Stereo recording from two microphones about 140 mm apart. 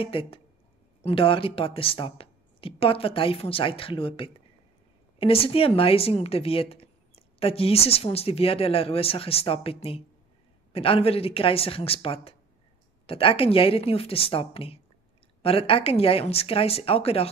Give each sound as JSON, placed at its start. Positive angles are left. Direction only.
{"t": 0.0, "sound": "speech", "side_deg": 40}